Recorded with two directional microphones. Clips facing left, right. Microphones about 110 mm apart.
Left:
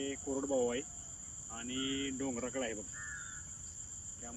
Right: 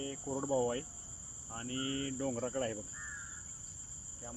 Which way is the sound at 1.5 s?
40° right (ahead or behind).